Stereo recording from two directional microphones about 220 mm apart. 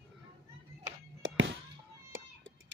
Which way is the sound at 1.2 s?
60° right (ahead or behind).